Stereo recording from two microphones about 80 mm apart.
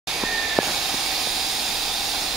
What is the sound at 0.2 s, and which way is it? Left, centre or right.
Hiss, centre.